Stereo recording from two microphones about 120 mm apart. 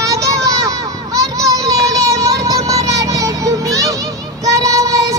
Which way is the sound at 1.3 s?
30° right (ahead or behind).